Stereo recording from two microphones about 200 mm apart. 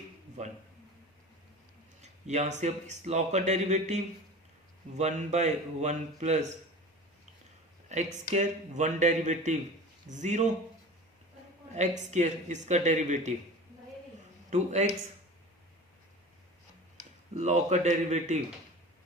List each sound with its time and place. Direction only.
0.4 s speech: 35° right (ahead or behind)
2.0 s speech: 35° right (ahead or behind)
8.3 s speech: 35° right (ahead or behind)
11.7 s speech: 35° right (ahead or behind)
14.5 s speech: 35° right (ahead or behind)
17.3 s speech: 35° right (ahead or behind)